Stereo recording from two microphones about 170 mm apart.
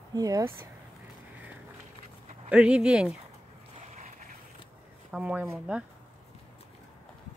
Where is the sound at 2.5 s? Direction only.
5° right (ahead or behind).